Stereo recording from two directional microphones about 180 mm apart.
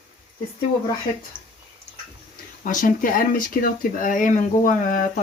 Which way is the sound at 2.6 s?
45° left (ahead or behind).